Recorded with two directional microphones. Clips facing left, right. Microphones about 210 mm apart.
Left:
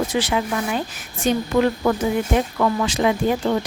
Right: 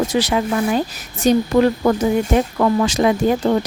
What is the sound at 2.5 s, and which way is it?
Speech, 40° right (ahead or behind).